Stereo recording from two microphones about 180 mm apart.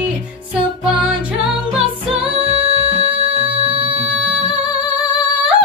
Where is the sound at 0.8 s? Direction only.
5° right (ahead or behind).